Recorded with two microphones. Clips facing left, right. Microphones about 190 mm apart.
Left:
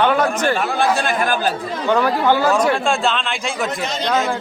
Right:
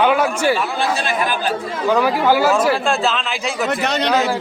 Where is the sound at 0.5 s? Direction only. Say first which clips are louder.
Left 2 dB; 50° left (ahead or behind).